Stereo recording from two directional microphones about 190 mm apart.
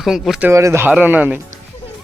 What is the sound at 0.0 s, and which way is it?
Speech, centre (ahead or behind).